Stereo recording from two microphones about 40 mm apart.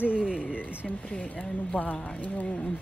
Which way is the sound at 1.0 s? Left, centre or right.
Left.